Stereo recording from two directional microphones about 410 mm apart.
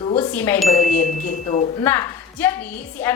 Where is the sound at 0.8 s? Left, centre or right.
Centre.